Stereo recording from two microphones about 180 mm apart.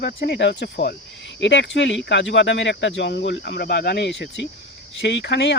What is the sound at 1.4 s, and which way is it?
Speech, 85° left.